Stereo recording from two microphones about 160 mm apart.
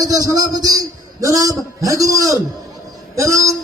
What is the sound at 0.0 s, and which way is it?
A man's voice, 20° right (ahead or behind).